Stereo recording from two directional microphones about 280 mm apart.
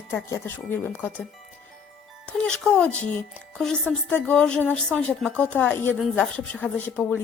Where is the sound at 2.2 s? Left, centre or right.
Centre.